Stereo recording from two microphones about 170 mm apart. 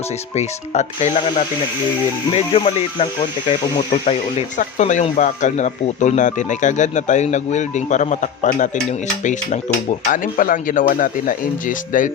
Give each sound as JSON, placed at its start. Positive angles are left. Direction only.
{"t": 0.3, "sound": "speech", "side_deg": 40}
{"t": 2.3, "sound": "speech", "side_deg": 35}